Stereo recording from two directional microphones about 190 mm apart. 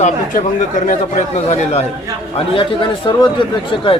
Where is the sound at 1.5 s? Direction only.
35° left (ahead or behind).